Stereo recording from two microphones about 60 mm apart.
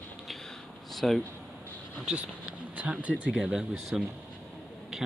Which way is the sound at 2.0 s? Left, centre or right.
Centre.